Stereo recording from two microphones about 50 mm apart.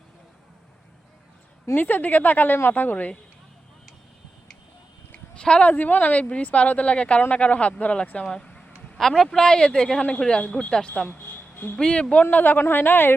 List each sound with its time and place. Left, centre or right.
1.7 s speech: left
5.1 s a sound: centre
5.6 s speech: left; by 8.6 s centre
9.0 s speech: centre
9.4 s speech: centre
11.1 s a sound: left
11.8 s speech: centre
12.2 s a woman's voice: left